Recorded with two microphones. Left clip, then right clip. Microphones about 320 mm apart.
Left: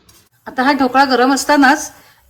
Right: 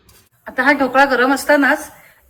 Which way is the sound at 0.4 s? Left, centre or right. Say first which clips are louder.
Even; centre.